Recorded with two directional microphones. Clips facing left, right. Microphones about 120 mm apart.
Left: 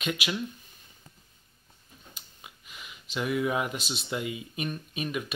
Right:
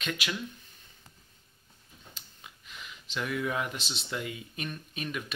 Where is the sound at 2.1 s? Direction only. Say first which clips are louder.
Left 1 dB; 10° left (ahead or behind).